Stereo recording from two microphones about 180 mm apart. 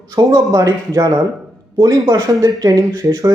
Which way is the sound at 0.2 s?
20° right (ahead or behind).